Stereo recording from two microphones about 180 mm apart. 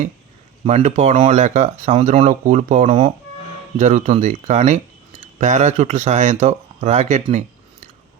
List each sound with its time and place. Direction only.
0.6 s speech: 35° right (ahead or behind)